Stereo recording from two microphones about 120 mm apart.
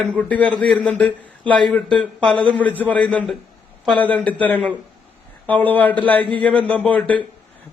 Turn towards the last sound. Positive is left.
turn(degrees=15)  # may be behind; listen again after turning